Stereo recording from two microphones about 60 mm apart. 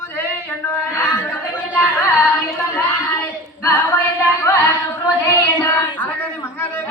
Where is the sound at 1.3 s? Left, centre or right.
Left.